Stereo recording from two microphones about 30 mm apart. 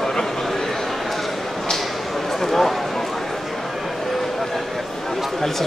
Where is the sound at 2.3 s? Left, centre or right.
Centre.